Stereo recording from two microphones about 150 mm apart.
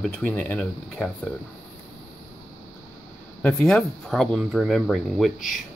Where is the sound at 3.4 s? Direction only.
5° left (ahead or behind).